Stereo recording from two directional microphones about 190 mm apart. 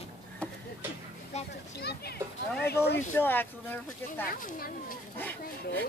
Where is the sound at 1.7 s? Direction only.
55° left (ahead or behind).